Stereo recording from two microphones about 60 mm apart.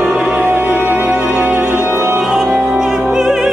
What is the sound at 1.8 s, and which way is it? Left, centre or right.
Music, right.